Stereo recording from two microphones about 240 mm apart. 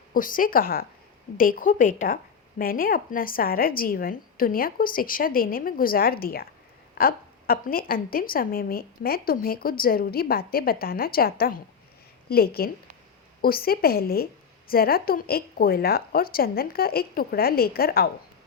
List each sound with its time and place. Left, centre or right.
0.1 s a woman's voice: left